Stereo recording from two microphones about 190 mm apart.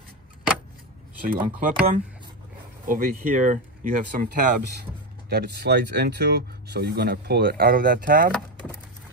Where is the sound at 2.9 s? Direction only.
45° right (ahead or behind).